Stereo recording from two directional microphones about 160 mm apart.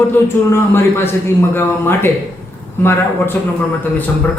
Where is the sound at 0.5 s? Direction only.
15° left (ahead or behind).